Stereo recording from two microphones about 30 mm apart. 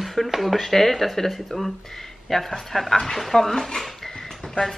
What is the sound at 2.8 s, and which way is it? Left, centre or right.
Speech, centre.